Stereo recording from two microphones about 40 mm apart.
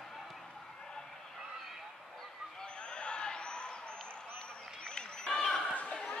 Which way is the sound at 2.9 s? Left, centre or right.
Left.